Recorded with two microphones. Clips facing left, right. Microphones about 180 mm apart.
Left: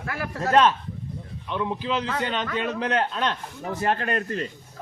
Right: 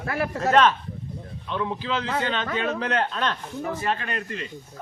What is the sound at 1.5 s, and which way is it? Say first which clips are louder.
A man's voice: left 1 dB; 10° left (ahead or behind).